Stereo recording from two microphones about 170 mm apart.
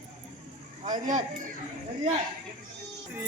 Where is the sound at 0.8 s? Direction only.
50° right (ahead or behind).